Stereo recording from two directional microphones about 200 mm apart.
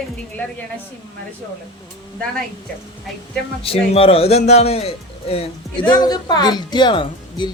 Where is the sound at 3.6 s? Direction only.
30° left (ahead or behind).